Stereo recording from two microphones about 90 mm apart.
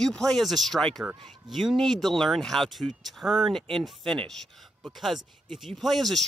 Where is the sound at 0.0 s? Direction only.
5° left (ahead or behind).